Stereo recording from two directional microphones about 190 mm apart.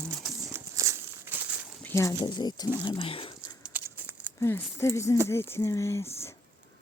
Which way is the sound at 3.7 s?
10° right (ahead or behind).